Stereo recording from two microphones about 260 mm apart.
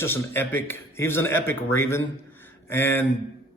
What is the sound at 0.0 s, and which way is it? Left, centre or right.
A man's voice, centre.